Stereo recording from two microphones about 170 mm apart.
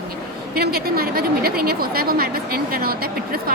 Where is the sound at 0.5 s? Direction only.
65° right (ahead or behind).